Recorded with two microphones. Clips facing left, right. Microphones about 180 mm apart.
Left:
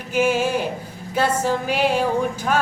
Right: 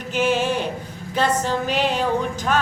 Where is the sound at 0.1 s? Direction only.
10° left (ahead or behind).